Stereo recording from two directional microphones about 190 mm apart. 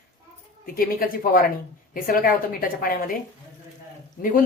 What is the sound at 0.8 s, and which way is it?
A woman's voice, 50° left (ahead or behind).